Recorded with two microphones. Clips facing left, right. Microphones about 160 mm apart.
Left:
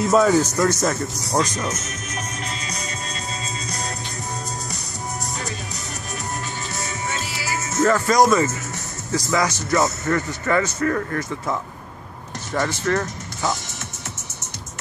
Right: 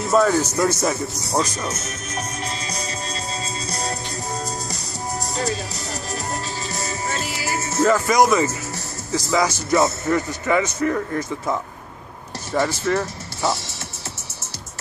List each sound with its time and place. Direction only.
0.1 s speech: 5° left (ahead or behind)
3.6 s music: 30° right (ahead or behind)
6.7 s music: 35° right (ahead or behind)
7.8 s speech: 5° right (ahead or behind)
12.5 s speech: 5° right (ahead or behind)